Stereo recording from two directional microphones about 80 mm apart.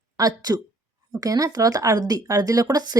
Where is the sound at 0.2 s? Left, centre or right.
Right.